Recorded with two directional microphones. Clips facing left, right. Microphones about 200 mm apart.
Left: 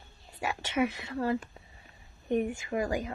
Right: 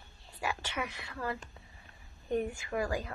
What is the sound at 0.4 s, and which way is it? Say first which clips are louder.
A woman's voice: left 7 dB; 20° left (ahead or behind).